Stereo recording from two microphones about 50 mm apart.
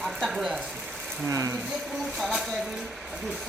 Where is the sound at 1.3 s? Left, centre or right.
Right.